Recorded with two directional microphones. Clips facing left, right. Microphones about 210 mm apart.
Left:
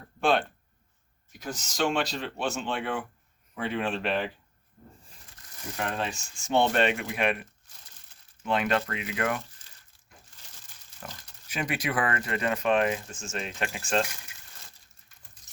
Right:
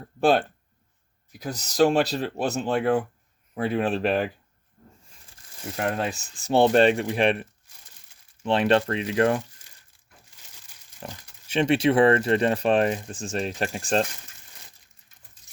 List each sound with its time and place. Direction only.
0.2 s speech: 35° right (ahead or behind)
5.8 s speech: 40° right (ahead or behind)
8.4 s speech: 30° right (ahead or behind)
9.6 s crumpling: 10° right (ahead or behind)
11.0 s speech: 25° right (ahead or behind)